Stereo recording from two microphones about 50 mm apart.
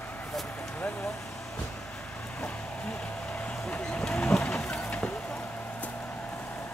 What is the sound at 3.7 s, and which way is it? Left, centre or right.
Vehicle, centre.